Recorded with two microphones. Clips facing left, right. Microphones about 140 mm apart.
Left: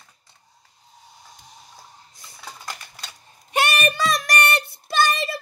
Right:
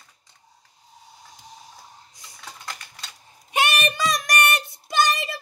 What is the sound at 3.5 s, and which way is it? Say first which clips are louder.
Child singing: left 2 dB; 20° right (ahead or behind).